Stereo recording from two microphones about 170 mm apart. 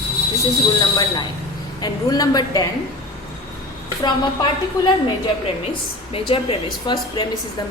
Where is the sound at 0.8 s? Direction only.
25° left (ahead or behind).